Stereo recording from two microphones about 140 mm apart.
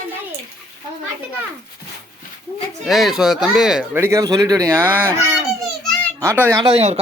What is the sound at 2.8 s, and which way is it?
Speech, centre (ahead or behind).